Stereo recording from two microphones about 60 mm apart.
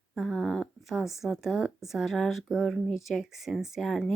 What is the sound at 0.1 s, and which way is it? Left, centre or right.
Speech, centre.